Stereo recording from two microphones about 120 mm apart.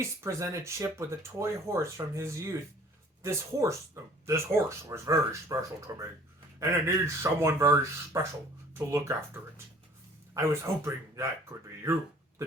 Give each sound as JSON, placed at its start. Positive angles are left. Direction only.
{"t": 0.0, "sound": "speech", "side_deg": -25}